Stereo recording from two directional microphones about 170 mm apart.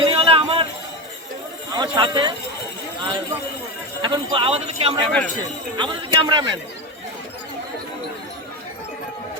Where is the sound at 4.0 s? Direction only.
30° right (ahead or behind).